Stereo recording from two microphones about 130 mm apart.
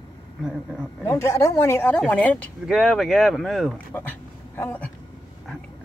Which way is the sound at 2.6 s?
Centre (ahead or behind).